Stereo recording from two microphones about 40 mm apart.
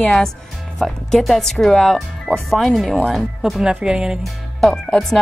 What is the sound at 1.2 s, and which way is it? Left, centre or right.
Speech, centre.